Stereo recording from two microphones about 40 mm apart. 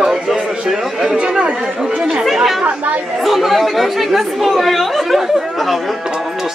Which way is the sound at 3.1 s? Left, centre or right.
Centre.